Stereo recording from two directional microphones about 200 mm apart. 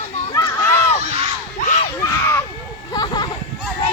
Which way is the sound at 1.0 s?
35° right (ahead or behind).